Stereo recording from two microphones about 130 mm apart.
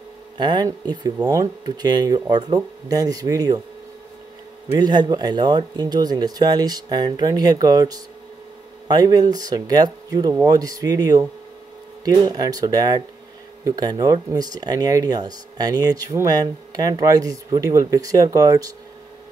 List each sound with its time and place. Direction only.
0.4 s speech: 35° right (ahead or behind)
4.7 s speech: 35° right (ahead or behind)